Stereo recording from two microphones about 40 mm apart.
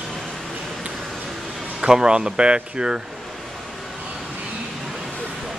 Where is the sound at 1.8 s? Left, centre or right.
Centre.